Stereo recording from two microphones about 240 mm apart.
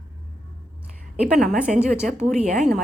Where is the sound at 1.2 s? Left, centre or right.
Centre.